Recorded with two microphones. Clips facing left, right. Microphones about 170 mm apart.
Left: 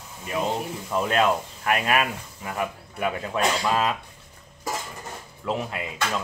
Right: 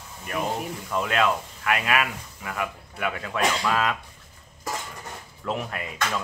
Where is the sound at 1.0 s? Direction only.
30° left (ahead or behind).